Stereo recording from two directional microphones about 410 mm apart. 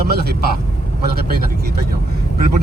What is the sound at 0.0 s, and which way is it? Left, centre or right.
Speech, right.